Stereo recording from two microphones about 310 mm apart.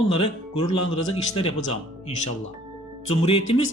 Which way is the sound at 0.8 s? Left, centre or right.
Left.